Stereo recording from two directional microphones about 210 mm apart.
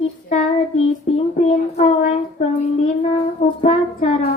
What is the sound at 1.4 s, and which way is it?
Child singing, 35° left (ahead or behind).